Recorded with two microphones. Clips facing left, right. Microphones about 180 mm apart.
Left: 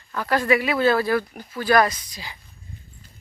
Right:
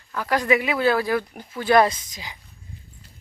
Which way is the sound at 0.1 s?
10° right (ahead or behind).